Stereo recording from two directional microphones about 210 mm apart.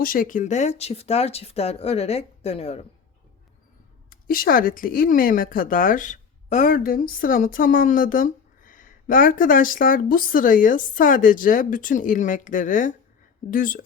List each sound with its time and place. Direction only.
0.0 s speech: 40° left (ahead or behind)
4.1 s speech: 45° left (ahead or behind)